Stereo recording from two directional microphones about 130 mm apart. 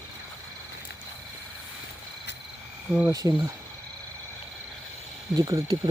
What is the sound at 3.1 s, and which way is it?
Cricket, 25° right (ahead or behind).